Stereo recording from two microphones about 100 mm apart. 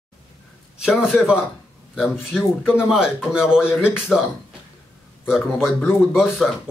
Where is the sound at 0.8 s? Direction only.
5° right (ahead or behind).